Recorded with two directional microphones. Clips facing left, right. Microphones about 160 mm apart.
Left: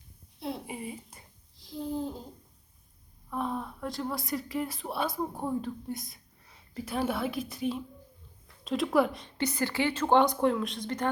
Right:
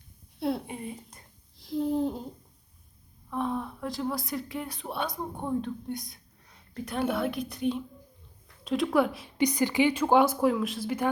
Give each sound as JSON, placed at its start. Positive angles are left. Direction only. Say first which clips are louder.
{"t": 0.7, "sound": "speech", "louder": "right 1 dB", "side_deg": 5}
{"t": 1.5, "sound": "a sound", "louder": "right 6 dB", "side_deg": -60}
{"t": 3.2, "sound": "a woman's voice", "louder": "right 2 dB", "side_deg": 0}
{"t": 9.4, "sound": "speech", "louder": "right 5 dB", "side_deg": -15}